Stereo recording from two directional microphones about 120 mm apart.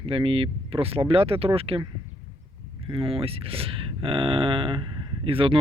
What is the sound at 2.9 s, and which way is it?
Speech, 50° right (ahead or behind).